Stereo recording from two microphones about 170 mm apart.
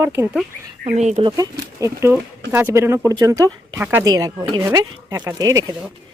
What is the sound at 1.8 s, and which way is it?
Speech, 15° right (ahead or behind).